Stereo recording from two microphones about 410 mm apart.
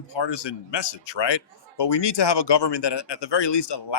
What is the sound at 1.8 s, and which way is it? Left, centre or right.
Speech, left.